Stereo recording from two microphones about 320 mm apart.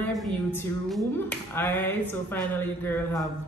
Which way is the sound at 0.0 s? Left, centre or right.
Centre.